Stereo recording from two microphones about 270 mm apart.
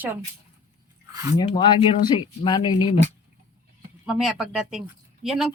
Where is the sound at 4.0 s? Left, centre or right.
Centre.